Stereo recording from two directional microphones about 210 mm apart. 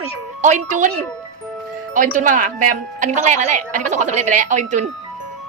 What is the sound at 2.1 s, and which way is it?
Speech, 40° right (ahead or behind).